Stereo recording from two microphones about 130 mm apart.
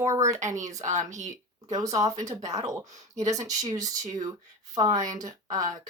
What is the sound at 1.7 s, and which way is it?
Speech, 25° right (ahead or behind).